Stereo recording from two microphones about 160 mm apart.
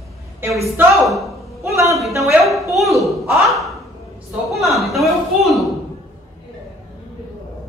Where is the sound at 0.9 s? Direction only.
Centre (ahead or behind).